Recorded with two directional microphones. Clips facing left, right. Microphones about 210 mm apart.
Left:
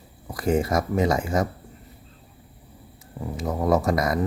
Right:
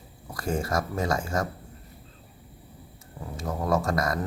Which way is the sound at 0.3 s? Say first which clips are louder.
Left 6 dB; 20° left (ahead or behind).